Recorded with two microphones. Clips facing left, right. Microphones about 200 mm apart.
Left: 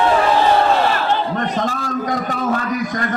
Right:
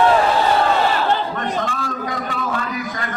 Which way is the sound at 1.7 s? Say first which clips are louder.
Left 4 dB; 40° left (ahead or behind).